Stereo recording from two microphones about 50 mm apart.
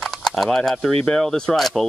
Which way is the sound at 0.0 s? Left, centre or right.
Centre.